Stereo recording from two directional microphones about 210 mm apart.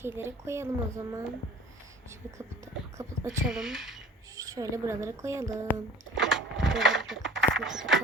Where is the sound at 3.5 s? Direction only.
Centre (ahead or behind).